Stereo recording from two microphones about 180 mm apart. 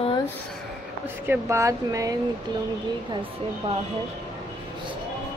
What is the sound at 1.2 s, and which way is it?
Speech, 15° right (ahead or behind).